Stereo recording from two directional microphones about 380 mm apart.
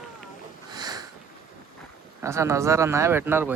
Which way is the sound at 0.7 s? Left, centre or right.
Centre.